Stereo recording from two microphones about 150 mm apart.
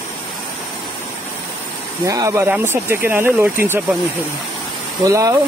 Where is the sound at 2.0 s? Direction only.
20° right (ahead or behind).